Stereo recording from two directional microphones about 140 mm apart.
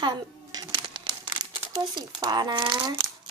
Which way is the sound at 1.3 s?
30° right (ahead or behind).